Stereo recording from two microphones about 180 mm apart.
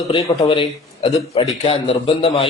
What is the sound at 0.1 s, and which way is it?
A man's voice, 30° left (ahead or behind).